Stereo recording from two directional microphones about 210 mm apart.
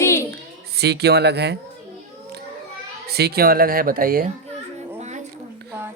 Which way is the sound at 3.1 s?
50° right (ahead or behind).